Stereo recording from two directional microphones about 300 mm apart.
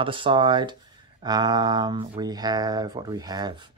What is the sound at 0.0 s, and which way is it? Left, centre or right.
Speech, centre.